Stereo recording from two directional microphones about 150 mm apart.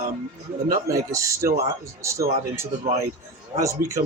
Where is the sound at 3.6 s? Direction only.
20° right (ahead or behind).